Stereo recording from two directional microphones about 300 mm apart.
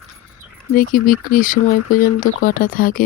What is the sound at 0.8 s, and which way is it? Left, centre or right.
Speech, left.